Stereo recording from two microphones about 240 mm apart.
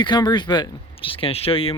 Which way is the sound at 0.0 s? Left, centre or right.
Centre.